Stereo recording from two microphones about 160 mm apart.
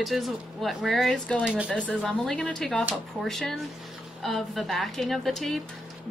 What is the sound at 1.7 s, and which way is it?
Speech, 5° left (ahead or behind).